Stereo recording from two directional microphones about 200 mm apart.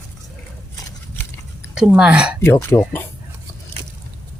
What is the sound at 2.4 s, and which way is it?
Speech, 10° left (ahead or behind).